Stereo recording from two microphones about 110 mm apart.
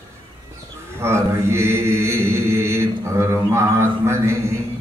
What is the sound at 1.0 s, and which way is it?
Mantra, 25° right (ahead or behind).